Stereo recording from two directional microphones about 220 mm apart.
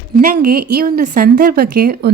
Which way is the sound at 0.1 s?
40° right (ahead or behind).